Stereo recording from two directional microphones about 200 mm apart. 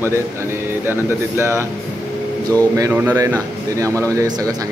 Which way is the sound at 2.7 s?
15° right (ahead or behind).